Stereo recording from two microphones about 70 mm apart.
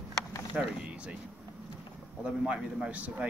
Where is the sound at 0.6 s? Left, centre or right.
Right.